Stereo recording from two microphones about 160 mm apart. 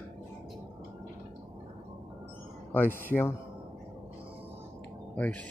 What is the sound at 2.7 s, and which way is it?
Speech, 10° left (ahead or behind).